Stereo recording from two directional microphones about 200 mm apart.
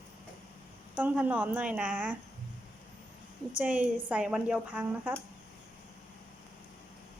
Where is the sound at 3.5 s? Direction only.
5° right (ahead or behind).